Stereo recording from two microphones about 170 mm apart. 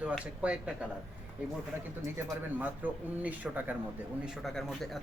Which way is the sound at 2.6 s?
10° right (ahead or behind).